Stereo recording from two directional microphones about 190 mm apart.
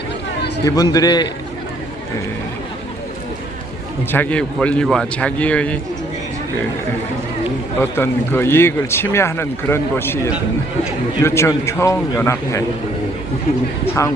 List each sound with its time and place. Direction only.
0.6 s a man's voice: 20° left (ahead or behind)
4.1 s speech: 10° left (ahead or behind)
7.8 s speech: 10° left (ahead or behind)
13.8 s speech: 15° left (ahead or behind)